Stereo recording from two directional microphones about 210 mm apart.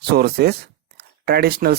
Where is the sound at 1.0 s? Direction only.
50° right (ahead or behind).